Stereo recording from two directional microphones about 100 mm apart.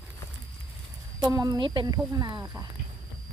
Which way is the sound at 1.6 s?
55° right (ahead or behind).